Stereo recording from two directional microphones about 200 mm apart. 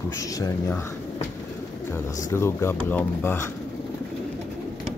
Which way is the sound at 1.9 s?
15° left (ahead or behind).